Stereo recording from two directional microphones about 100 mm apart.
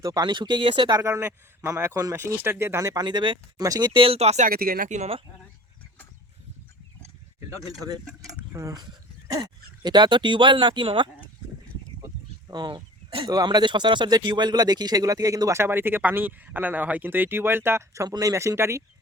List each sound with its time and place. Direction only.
0.0 s speech: 40° right (ahead or behind)
1.0 s speech: 30° right (ahead or behind)
3.0 s speech: 45° right (ahead or behind)
4.0 s speech: 85° right
8.5 s speech: 35° right (ahead or behind); by 11.1 s 55° right (ahead or behind)
12.5 s speech: 45° right (ahead or behind)
13.3 s speech: 40° right (ahead or behind)
15.6 s speech: 20° right (ahead or behind)